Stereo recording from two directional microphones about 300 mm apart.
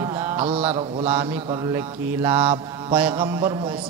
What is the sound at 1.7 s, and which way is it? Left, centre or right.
A man's voice, centre.